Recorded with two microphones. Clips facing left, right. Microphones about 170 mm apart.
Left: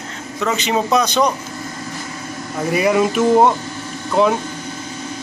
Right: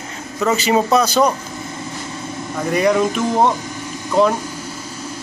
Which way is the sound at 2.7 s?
5° left (ahead or behind).